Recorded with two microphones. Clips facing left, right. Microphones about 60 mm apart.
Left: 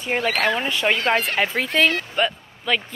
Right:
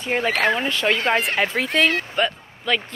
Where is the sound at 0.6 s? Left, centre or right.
Centre.